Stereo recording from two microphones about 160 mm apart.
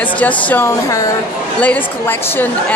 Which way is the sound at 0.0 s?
10° left (ahead or behind).